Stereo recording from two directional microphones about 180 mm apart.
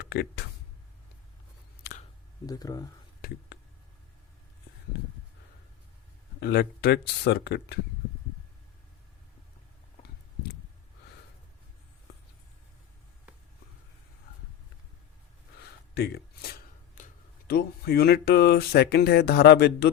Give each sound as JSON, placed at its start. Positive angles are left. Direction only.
{"t": 0.0, "sound": "speech", "side_deg": 70}
{"t": 2.5, "sound": "speech", "side_deg": 20}
{"t": 3.2, "sound": "whispering", "side_deg": 55}
{"t": 6.4, "sound": "speech", "side_deg": 65}
{"t": 16.0, "sound": "shuffling cards", "side_deg": 65}
{"t": 17.5, "sound": "speech", "side_deg": 65}